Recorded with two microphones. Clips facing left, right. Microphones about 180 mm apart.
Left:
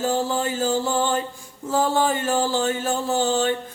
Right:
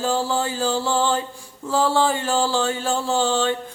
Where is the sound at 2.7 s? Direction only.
20° left (ahead or behind).